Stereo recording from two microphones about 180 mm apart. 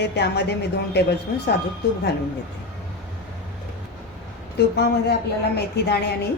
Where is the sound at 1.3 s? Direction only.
60° left (ahead or behind).